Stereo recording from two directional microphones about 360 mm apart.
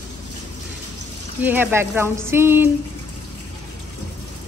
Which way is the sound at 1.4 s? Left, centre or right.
Centre.